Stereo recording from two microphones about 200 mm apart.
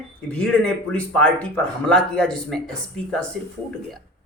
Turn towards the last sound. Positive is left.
turn(degrees=5)  # may be behind; listen again after turning